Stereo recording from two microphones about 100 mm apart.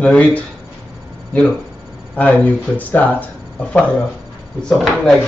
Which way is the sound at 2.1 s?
15° left (ahead or behind).